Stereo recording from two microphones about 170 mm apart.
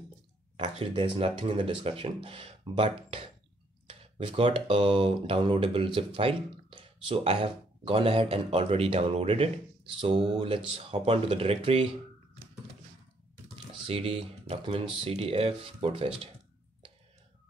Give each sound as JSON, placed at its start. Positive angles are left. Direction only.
{"t": 0.7, "sound": "speech", "side_deg": -30}
{"t": 13.8, "sound": "speech", "side_deg": -35}